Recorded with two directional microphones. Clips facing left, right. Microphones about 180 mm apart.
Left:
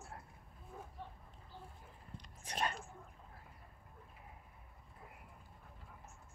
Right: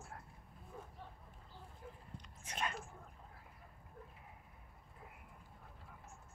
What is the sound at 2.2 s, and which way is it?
Whispering, 35° left (ahead or behind).